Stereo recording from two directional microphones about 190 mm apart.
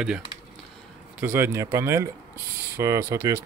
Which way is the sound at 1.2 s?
10° right (ahead or behind).